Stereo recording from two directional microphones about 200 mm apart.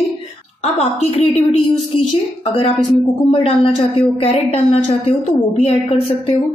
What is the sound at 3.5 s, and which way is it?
A woman's voice, 30° left (ahead or behind).